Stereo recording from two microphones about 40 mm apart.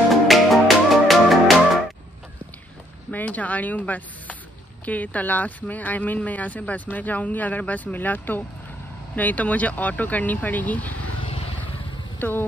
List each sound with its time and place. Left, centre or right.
0.1 s music: centre
3.1 s speech: left
12.2 s speech: left